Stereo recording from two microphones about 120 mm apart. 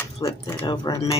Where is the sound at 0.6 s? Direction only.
35° left (ahead or behind).